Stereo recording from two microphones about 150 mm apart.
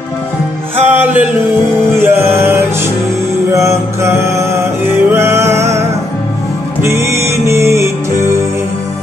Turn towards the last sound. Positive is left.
turn(degrees=-20)  # may be behind; listen again after turning